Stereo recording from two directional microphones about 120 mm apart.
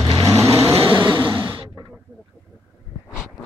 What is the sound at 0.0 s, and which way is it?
Vehicle, 30° right (ahead or behind).